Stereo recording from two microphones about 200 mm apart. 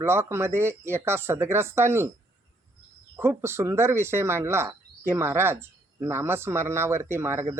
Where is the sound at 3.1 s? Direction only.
15° right (ahead or behind).